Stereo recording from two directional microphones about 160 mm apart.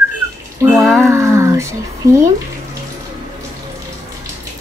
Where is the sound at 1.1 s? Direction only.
15° right (ahead or behind).